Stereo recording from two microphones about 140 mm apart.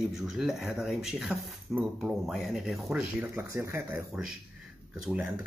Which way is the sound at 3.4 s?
20° right (ahead or behind).